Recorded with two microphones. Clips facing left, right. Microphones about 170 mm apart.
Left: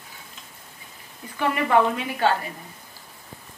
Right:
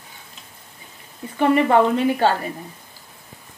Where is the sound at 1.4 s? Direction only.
30° right (ahead or behind).